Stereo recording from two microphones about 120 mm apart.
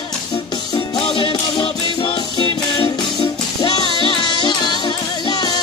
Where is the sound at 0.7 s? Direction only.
50° left (ahead or behind).